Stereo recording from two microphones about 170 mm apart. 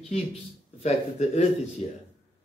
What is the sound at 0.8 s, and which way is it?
Speech, 40° left (ahead or behind).